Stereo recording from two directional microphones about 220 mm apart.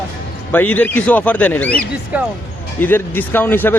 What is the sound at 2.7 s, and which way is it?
A man's voice, 10° left (ahead or behind).